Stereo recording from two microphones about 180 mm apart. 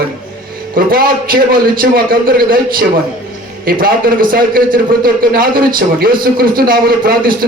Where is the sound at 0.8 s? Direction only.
55° right (ahead or behind).